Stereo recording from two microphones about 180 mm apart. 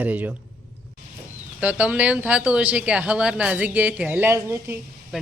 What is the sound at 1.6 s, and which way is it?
Speech, 5° right (ahead or behind).